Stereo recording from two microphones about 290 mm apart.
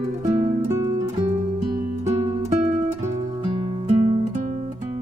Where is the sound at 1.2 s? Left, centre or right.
Right.